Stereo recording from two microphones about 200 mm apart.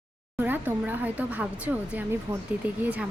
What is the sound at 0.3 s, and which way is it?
Speech, 10° right (ahead or behind).